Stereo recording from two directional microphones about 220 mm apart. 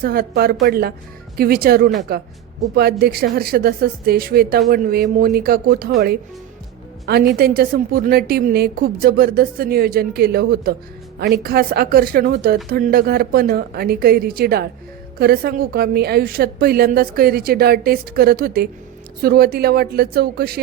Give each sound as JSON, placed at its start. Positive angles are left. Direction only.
{"t": 0.0, "sound": "a woman's voice", "side_deg": -40}
{"t": 7.3, "sound": "a woman's voice", "side_deg": -45}